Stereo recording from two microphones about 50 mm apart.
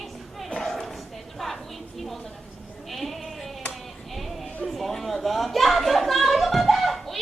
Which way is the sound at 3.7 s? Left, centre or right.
Centre.